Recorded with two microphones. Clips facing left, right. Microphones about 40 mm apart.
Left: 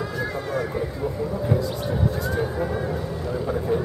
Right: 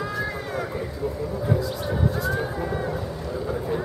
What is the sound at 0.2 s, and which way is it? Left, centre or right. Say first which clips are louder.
Run: left 2 dB; centre.